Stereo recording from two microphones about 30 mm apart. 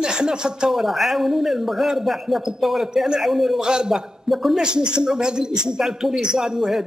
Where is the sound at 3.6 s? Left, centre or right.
Right.